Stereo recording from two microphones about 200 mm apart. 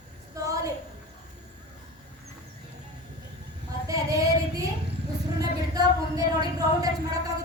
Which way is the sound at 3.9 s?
15° right (ahead or behind).